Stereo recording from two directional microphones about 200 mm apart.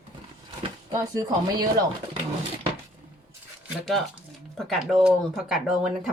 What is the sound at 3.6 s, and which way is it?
Speech, centre (ahead or behind).